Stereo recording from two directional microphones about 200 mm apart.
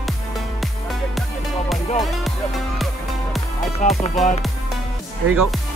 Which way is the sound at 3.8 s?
40° left (ahead or behind).